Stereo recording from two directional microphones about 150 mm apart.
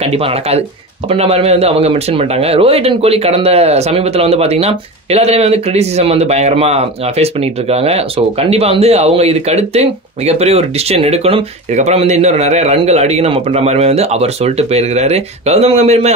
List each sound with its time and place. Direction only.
0.0 s speech: 40° right (ahead or behind)